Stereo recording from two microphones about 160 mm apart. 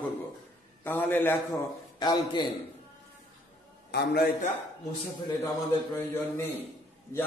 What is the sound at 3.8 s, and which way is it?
Speech, 90° left.